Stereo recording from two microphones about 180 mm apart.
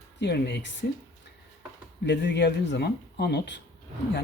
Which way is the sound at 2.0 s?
70° left (ahead or behind).